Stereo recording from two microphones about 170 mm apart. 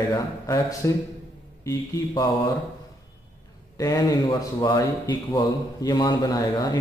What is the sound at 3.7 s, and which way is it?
Speech, 20° left (ahead or behind).